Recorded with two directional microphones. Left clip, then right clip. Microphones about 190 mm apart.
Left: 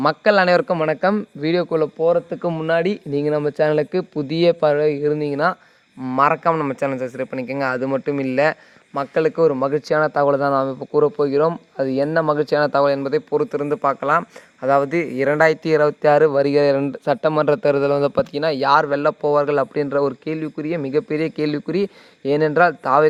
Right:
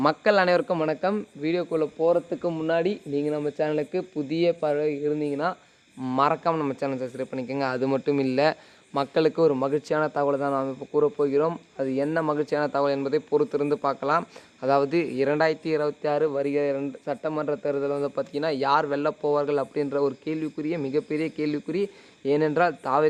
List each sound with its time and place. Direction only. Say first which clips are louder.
0.0 s speech: left 5 dB; 30° left (ahead or behind)
1.0 s speech: left 7 dB; 50° left (ahead or behind)
6.0 s a man's voice: left 6 dB; 25° left (ahead or behind)
10.2 s speech: left 8 dB; 45° left (ahead or behind)